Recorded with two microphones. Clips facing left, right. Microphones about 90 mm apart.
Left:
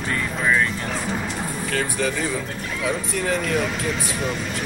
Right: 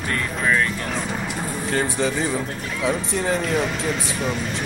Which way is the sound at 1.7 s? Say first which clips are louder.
Right 2 dB; 25° right (ahead or behind).